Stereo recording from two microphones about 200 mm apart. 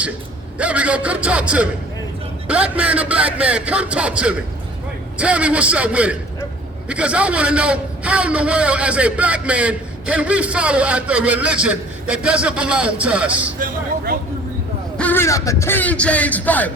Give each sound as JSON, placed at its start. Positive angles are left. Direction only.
{"t": 0.6, "sound": "a man's voice", "side_deg": -5}
{"t": 13.6, "sound": "speech", "side_deg": -45}
{"t": 14.9, "sound": "speech", "side_deg": 10}